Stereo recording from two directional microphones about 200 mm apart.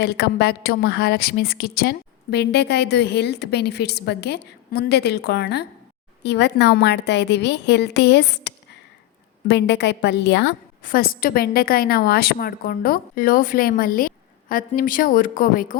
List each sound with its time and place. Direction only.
0.0 s a woman's voice: 55° left (ahead or behind)